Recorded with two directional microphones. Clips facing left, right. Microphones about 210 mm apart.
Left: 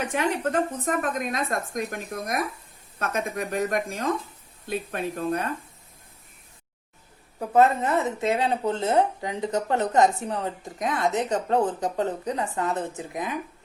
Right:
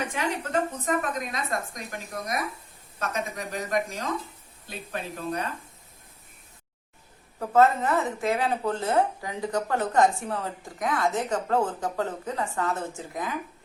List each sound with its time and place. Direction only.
0.9 s a woman's voice: 50° left (ahead or behind)
7.3 s speech: 15° left (ahead or behind)